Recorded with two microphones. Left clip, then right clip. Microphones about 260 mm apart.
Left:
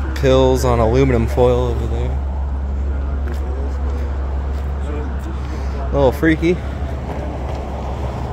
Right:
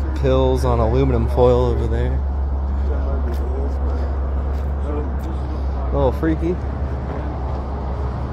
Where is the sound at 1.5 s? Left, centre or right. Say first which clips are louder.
Right 1 dB; centre.